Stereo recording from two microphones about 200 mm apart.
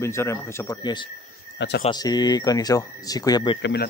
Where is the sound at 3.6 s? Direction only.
55° left (ahead or behind).